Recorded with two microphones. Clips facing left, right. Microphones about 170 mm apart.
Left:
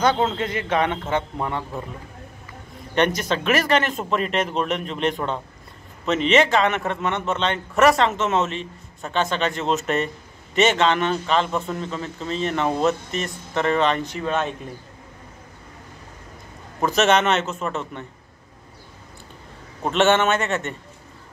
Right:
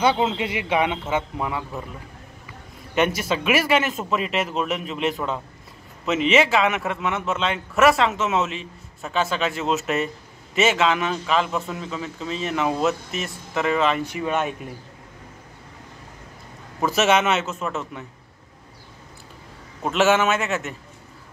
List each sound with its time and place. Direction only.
0.0 s speech: 10° right (ahead or behind)
2.9 s a man's voice: 5° right (ahead or behind)
16.8 s a man's voice: 5° right (ahead or behind)
19.8 s a man's voice: 5° right (ahead or behind)